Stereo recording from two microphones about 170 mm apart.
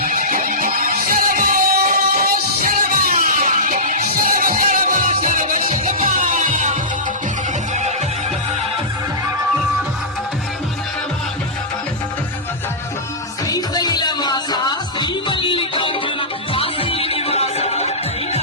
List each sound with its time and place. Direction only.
0.1 s music: 55° right (ahead or behind)
5.6 s music: 35° right (ahead or behind)
6.1 s music: 50° right (ahead or behind)
7.7 s neigh: 45° right (ahead or behind)
13.5 s music: 25° left (ahead or behind); by 17.9 s 40° left (ahead or behind)